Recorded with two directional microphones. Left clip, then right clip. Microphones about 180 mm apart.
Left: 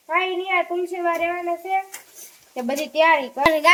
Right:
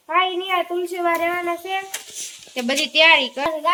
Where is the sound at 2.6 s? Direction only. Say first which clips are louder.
Right 3 dB; 10° left (ahead or behind).